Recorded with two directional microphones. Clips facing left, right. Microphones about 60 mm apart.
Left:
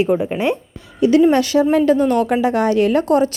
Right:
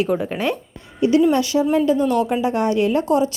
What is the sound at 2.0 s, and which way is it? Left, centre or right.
Speech, left.